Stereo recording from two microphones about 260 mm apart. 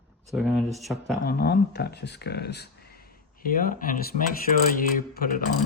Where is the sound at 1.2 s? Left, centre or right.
Left.